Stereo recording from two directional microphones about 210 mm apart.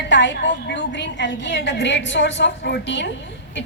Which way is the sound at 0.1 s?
60° left (ahead or behind).